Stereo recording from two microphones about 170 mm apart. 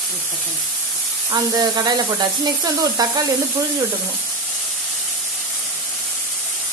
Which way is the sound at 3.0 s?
25° right (ahead or behind).